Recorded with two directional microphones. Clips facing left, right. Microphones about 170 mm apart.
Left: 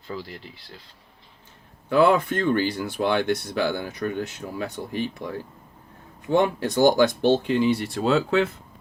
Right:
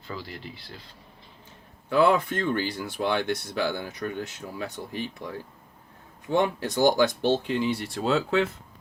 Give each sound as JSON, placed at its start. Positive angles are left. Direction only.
{"t": 0.1, "sound": "speech", "side_deg": 25}
{"t": 1.9, "sound": "speech", "side_deg": 65}
{"t": 6.3, "sound": "speech", "side_deg": 60}